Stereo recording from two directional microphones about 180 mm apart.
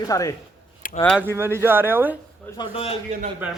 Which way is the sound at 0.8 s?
50° left (ahead or behind).